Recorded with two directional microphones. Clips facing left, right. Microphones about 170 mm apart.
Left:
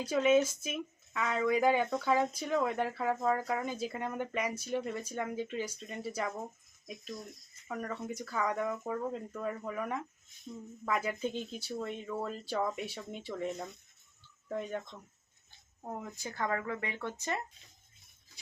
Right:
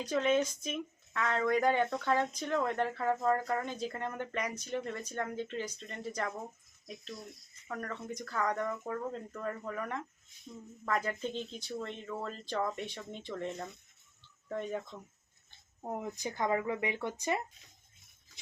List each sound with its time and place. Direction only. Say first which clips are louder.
0.0 s speech: left 3 dB; 10° left (ahead or behind)
7.7 s speech: left 2 dB; 5° left (ahead or behind)
15.8 s speech: right 4 dB; 15° right (ahead or behind)